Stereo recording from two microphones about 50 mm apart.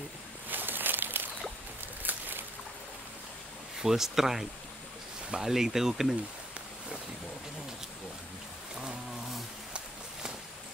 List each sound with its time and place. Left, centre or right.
0.5 s a sound: right
2.0 s boat: right
3.8 s speech: centre